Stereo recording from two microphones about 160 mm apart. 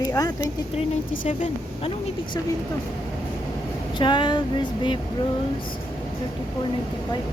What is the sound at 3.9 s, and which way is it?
Speech, 30° left (ahead or behind).